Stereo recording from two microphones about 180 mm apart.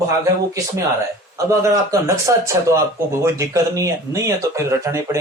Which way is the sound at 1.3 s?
15° right (ahead or behind).